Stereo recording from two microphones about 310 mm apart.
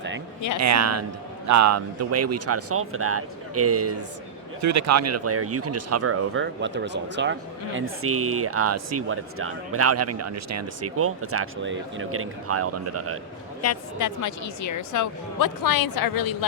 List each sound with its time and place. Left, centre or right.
0.6 s speech: right
4.6 s speech: right
13.6 s a woman's voice: left